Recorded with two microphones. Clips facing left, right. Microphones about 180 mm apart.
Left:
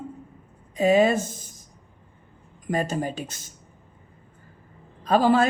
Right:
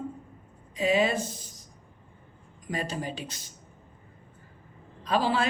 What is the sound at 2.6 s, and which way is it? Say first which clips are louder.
Speech: left 7 dB; 45° left (ahead or behind).